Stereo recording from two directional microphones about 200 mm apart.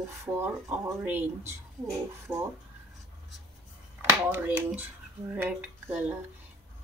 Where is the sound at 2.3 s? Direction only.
25° right (ahead or behind).